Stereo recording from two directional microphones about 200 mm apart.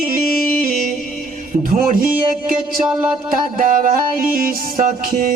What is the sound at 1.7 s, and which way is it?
Music, 45° right (ahead or behind).